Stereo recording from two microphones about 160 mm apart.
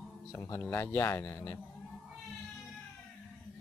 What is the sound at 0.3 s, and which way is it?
Speech, 15° left (ahead or behind).